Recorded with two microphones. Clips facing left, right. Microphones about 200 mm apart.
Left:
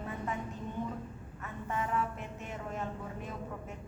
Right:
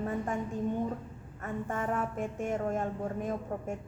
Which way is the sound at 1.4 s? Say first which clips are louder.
Right 3 dB; 50° right (ahead or behind).